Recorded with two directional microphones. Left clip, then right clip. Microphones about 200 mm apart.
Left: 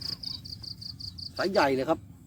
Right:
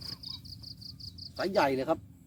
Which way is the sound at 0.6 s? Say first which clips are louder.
Left 6 dB; 5° right (ahead or behind).